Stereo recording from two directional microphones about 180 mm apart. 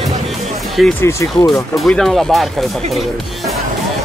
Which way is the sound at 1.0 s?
15° left (ahead or behind).